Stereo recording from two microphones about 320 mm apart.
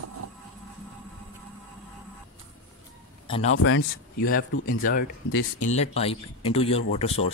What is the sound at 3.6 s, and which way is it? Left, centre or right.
Speech, left.